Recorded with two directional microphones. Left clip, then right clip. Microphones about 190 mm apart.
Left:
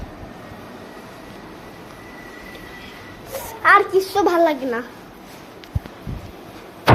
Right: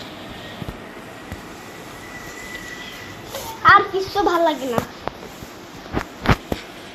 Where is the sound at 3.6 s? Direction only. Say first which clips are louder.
Right 1 dB; 25° left (ahead or behind).